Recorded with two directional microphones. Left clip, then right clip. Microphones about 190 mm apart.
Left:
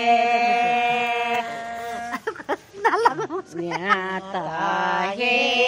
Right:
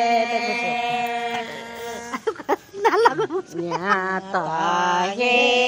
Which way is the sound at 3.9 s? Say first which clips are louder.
Right 1 dB; 10° right (ahead or behind).